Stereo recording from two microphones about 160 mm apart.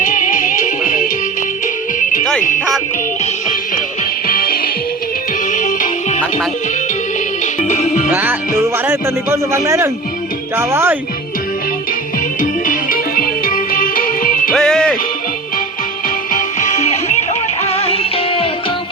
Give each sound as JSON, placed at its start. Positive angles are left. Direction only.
{"t": 0.0, "sound": "music", "side_deg": 55}
{"t": 3.4, "sound": "music", "side_deg": 55}
{"t": 4.3, "sound": "music", "side_deg": 65}
{"t": 5.5, "sound": "music", "side_deg": 55}
{"t": 7.4, "sound": "music", "side_deg": 50}
{"t": 8.1, "sound": "music", "side_deg": -10}
{"t": 12.4, "sound": "music", "side_deg": 55}
{"t": 14.5, "sound": "music", "side_deg": 5}
{"t": 16.0, "sound": "music", "side_deg": 55}